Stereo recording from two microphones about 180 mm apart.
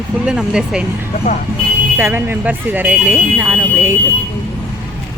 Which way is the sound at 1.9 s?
10° right (ahead or behind).